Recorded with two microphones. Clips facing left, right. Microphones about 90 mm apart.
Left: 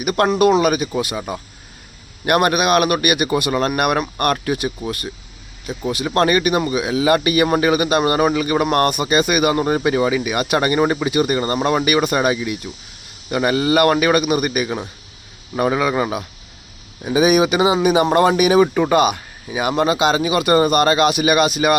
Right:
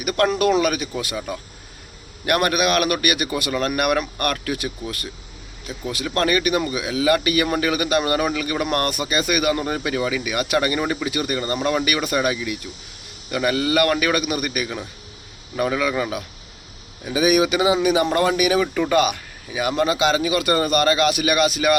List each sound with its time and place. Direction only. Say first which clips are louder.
0.6 s speech: left 5 dB; 15° left (ahead or behind)
3.5 s speech: left 3 dB; 35° left (ahead or behind)
4.2 s speech: left 5 dB; 20° left (ahead or behind)
6.1 s speech: left 5 dB; 30° left (ahead or behind)
6.3 s speech: left 3 dB; 20° left (ahead or behind)
8.9 s speech: left 5 dB; 20° left (ahead or behind)
18.6 s speech: left 6 dB; 40° left (ahead or behind)
18.9 s speech: left 3 dB; 20° left (ahead or behind)